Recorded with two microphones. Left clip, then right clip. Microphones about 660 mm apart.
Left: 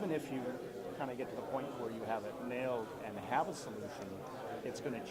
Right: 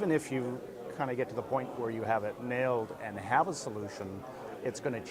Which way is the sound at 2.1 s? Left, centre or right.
Right.